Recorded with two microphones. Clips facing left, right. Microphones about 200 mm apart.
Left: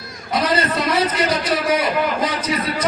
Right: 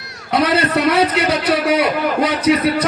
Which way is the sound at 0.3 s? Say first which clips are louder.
Right 4 dB; 65° right (ahead or behind).